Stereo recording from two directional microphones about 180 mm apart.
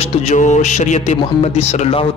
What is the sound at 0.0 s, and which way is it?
A man's voice, 35° left (ahead or behind).